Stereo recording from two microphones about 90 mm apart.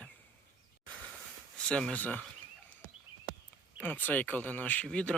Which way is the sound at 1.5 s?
10° left (ahead or behind).